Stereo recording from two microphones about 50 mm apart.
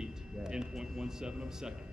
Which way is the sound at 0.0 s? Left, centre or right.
Centre.